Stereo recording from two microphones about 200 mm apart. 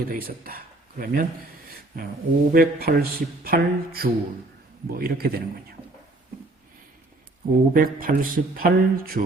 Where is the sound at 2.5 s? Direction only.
50° right (ahead or behind).